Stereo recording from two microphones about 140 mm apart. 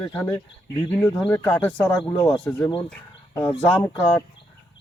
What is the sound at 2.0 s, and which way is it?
Speech, 35° left (ahead or behind).